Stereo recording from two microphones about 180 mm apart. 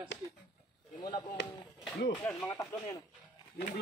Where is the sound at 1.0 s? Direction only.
25° left (ahead or behind).